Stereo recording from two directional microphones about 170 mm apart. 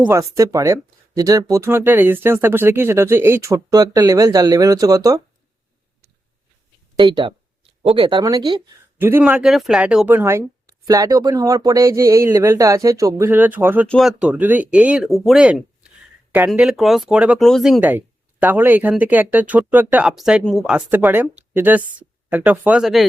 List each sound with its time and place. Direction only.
0.0 s speech: 15° right (ahead or behind)
6.9 s speech: 25° right (ahead or behind)
9.0 s speech: 10° right (ahead or behind)
13.8 s speech: 5° left (ahead or behind)
14.2 s speech: 10° right (ahead or behind)
20.7 s speech: 10° right (ahead or behind)